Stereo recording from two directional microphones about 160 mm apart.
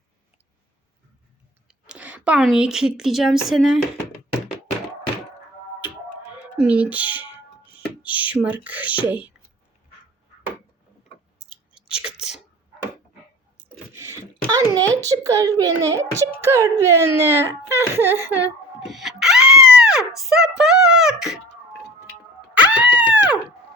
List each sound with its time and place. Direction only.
1.6 s speech: 10° right (ahead or behind)
6.6 s speech: 5° right (ahead or behind)
11.3 s chewing: 5° right (ahead or behind)
13.6 s a sound: 15° right (ahead or behind)
15.0 s a child's voice: 20° right (ahead or behind)
18.9 s music: centre (ahead or behind)
19.8 s a sound: 5° right (ahead or behind)
22.5 s dog: 10° right (ahead or behind)